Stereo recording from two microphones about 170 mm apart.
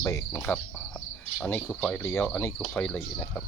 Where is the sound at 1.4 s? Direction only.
10° left (ahead or behind).